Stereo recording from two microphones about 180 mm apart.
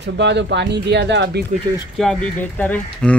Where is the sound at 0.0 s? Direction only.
70° right (ahead or behind).